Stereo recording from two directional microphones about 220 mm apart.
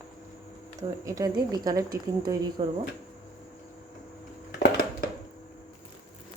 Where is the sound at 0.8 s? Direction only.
15° right (ahead or behind).